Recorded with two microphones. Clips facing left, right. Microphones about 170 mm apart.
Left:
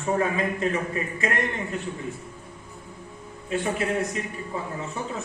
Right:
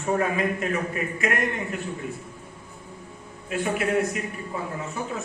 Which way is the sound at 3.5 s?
30° left (ahead or behind).